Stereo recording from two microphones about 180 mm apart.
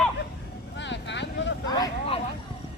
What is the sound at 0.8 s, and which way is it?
Vehicle, 80° left.